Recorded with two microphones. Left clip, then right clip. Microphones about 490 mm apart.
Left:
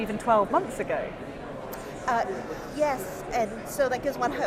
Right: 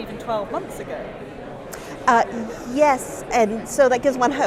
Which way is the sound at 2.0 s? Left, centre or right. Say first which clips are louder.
Right 10 dB; right.